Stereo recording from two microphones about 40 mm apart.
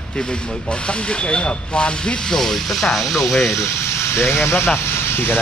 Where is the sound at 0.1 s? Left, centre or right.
Left.